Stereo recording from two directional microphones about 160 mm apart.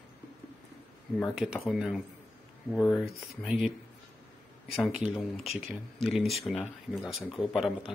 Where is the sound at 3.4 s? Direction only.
Centre (ahead or behind).